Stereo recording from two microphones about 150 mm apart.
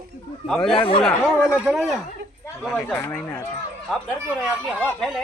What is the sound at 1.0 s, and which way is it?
Speech, centre (ahead or behind).